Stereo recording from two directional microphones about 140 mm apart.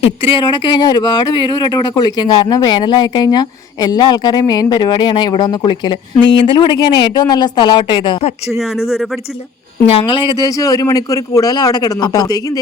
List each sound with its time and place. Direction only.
0.0 s speech: 40° left (ahead or behind)
10.1 s speech: 30° left (ahead or behind)